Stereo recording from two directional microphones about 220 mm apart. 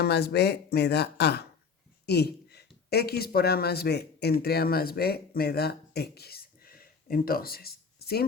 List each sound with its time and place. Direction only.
0.0 s speech: 50° left (ahead or behind)